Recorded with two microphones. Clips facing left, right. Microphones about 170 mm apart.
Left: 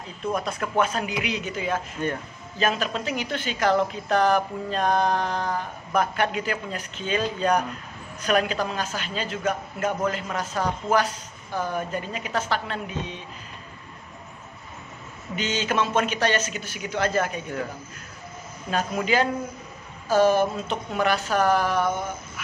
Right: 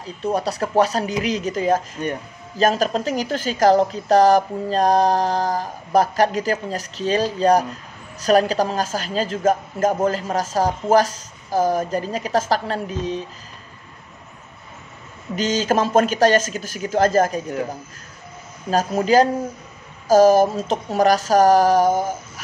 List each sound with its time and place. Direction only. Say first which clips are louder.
0.0 s a woman's voice: right 5 dB; 35° right (ahead or behind)
2.0 s speech: right 2 dB; 20° right (ahead or behind)
2.5 s a woman's voice: right 7 dB; 40° right (ahead or behind)
15.3 s a woman's voice: right 6 dB; 40° right (ahead or behind)